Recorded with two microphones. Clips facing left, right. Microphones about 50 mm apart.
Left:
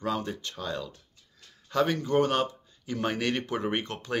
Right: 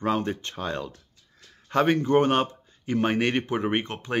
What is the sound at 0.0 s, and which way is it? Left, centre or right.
Speech, right.